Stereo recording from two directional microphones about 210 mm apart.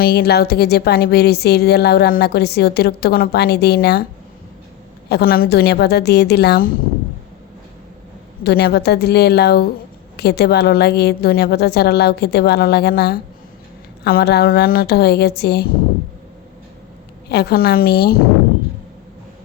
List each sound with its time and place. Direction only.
0.0 s speech: 50° left (ahead or behind)
5.0 s speech: 50° left (ahead or behind)
8.4 s speech: 50° left (ahead or behind)
17.2 s speech: 50° left (ahead or behind)